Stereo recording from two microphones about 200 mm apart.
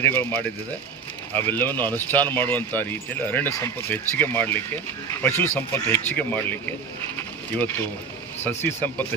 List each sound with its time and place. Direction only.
0.0 s speech: 10° left (ahead or behind)